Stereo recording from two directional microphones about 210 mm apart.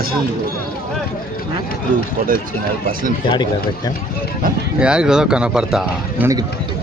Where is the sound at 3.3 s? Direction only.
20° left (ahead or behind).